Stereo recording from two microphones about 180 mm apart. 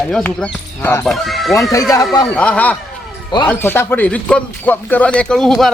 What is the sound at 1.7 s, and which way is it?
Speech, 20° left (ahead or behind).